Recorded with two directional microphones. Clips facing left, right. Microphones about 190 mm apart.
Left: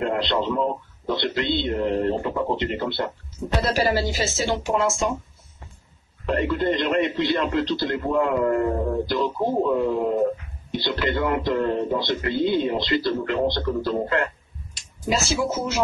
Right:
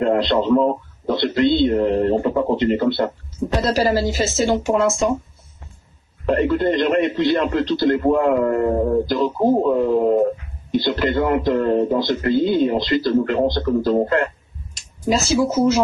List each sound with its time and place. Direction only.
0.0 s a man's voice: 45° right (ahead or behind)
6.2 s a man's voice: 45° right (ahead or behind)